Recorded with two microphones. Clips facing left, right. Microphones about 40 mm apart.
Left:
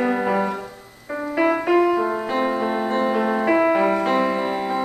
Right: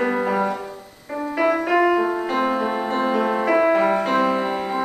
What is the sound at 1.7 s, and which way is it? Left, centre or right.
Music, centre.